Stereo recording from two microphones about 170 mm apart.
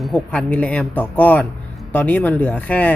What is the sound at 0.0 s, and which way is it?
A woman's voice, centre (ahead or behind).